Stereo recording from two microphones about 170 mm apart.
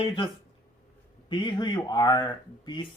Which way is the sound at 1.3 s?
25° left (ahead or behind).